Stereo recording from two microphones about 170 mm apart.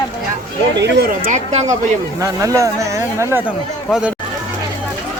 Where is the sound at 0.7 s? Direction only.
80° right.